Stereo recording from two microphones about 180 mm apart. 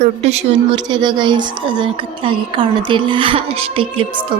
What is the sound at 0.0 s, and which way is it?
Speech, 35° right (ahead or behind).